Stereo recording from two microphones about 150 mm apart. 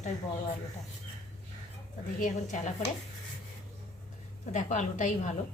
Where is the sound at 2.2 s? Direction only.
55° left (ahead or behind).